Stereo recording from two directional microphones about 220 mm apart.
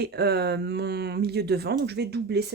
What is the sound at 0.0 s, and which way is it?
Speech, 45° right (ahead or behind).